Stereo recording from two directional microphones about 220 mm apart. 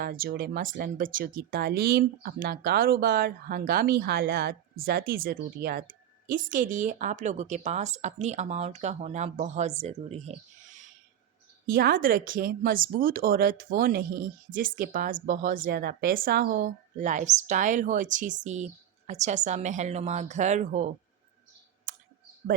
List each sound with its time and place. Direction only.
0.0 s speech: 45° right (ahead or behind)